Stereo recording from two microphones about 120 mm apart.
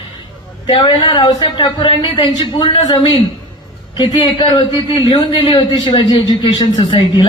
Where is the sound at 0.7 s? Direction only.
40° left (ahead or behind).